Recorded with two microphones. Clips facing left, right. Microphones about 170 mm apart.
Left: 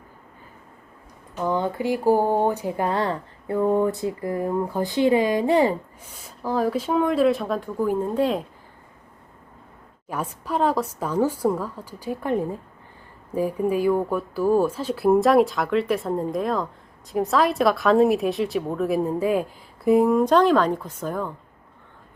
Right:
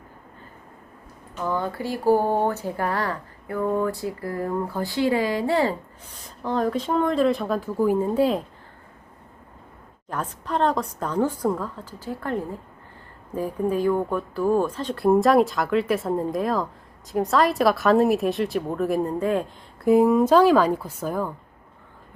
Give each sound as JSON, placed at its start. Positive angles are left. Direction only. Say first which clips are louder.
{"t": 1.5, "sound": "speech", "louder": "left 3 dB", "side_deg": 20}
{"t": 6.4, "sound": "speech", "louder": "left 1 dB", "side_deg": 5}
{"t": 10.1, "sound": "a woman's voice", "louder": "left 1 dB", "side_deg": 10}